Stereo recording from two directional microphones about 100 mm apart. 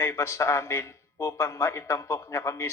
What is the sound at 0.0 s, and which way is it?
A man's voice, 30° left (ahead or behind).